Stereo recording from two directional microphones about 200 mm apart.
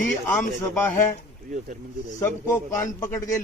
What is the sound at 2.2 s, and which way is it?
A man's voice, 15° left (ahead or behind).